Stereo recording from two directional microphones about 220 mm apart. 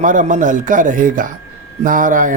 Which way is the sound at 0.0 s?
35° right (ahead or behind).